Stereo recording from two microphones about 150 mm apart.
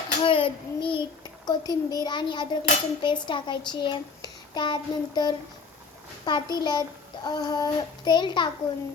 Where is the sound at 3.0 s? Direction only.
30° left (ahead or behind).